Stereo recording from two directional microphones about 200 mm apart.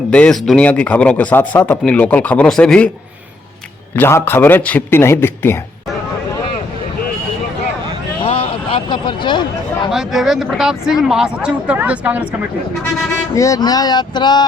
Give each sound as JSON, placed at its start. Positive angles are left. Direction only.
{"t": 0.1, "sound": "speech", "side_deg": 5}
{"t": 3.9, "sound": "speech", "side_deg": 10}
{"t": 8.2, "sound": "vehicle", "side_deg": 25}
{"t": 9.9, "sound": "speech", "side_deg": 0}
{"t": 13.3, "sound": "speech", "side_deg": 15}